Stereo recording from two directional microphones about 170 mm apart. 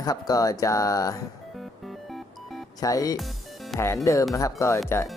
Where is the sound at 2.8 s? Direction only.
20° left (ahead or behind).